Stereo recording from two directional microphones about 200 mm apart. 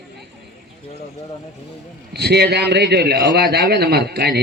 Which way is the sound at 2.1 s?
55° right (ahead or behind).